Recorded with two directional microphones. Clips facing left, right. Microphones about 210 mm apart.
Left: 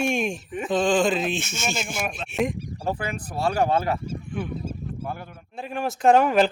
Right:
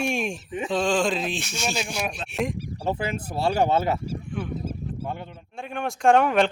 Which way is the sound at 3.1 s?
25° right (ahead or behind).